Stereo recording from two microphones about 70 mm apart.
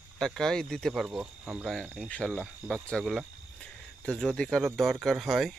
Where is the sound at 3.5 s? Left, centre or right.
Centre.